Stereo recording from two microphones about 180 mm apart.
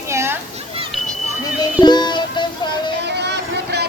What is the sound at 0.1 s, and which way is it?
Children playing, 15° right (ahead or behind).